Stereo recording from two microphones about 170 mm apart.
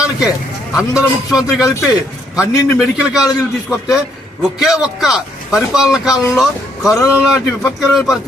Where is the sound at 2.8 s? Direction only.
5° right (ahead or behind).